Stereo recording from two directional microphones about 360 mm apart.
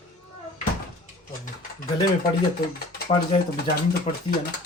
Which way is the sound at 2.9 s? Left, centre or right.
Left.